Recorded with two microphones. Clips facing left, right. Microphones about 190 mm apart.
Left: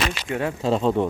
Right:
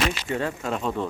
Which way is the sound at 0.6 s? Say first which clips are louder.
Left 7 dB; 30° left (ahead or behind).